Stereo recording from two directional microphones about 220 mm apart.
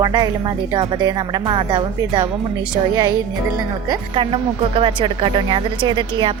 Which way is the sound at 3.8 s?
20° right (ahead or behind).